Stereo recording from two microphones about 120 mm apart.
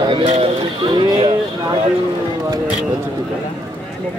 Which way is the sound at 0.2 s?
65° right (ahead or behind).